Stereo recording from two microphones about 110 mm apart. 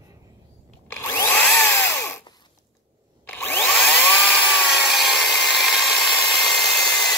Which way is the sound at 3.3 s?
15° left (ahead or behind).